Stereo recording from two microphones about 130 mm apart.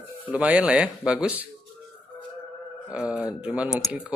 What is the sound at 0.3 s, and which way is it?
Speech, 10° right (ahead or behind).